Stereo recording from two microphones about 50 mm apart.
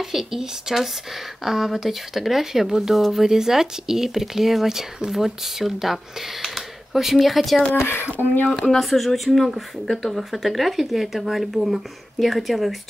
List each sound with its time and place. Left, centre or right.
0.0 s speech: centre
7.8 s speech: left
8.5 s speech: centre